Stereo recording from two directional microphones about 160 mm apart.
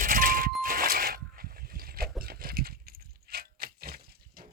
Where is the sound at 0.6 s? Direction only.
60° right (ahead or behind).